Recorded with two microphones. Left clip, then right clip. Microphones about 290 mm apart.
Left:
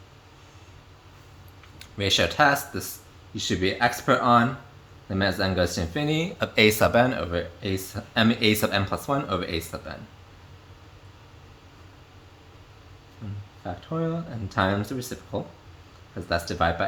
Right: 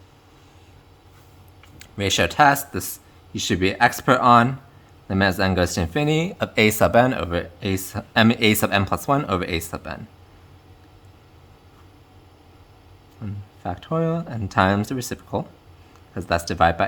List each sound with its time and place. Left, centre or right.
1.8 s speech: right
13.2 s a sound: right
13.7 s speech: right